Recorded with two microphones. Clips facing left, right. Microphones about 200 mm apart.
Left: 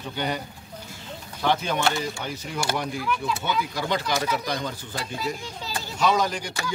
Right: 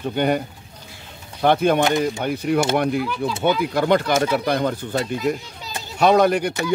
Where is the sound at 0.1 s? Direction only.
55° right (ahead or behind).